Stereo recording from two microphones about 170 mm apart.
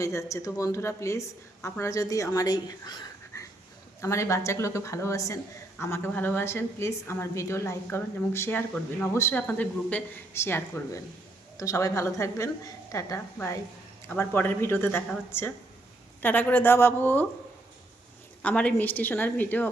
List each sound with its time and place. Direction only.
0.0 s a woman's voice: 15° left (ahead or behind)
18.4 s a woman's voice: 5° left (ahead or behind)